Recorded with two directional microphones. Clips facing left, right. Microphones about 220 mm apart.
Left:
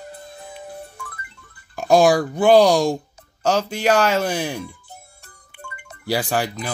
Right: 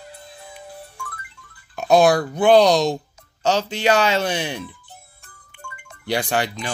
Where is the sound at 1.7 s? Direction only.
10° left (ahead or behind).